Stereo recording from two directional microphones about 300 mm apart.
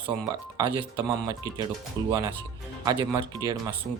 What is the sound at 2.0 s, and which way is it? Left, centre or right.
Speech, centre.